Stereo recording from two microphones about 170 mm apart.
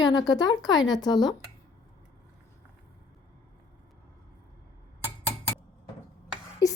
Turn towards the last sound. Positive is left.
turn(degrees=20)  # may be behind; listen again after turning